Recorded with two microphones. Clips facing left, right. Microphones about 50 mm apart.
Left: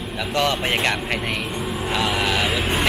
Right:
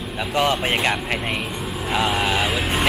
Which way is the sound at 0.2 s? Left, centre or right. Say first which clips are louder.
Right 1 dB; centre.